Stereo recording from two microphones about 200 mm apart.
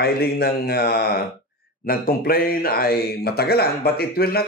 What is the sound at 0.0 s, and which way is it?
Speech, 50° left (ahead or behind).